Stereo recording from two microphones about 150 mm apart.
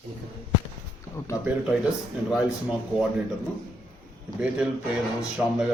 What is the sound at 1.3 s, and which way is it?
Speech, 20° left (ahead or behind).